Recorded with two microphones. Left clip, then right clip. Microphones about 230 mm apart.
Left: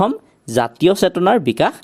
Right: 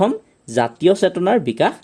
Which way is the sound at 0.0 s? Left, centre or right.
Left.